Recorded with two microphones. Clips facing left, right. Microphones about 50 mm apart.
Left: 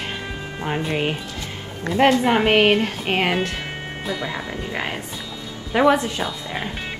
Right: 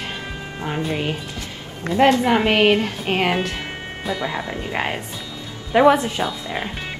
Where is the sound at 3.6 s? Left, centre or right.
Centre.